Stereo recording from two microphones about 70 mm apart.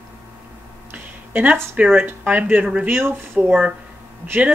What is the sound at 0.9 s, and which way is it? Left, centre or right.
Speech, right.